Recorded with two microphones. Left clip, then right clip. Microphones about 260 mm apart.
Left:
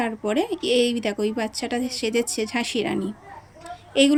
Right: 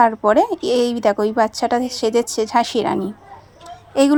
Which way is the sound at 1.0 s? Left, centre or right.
Right.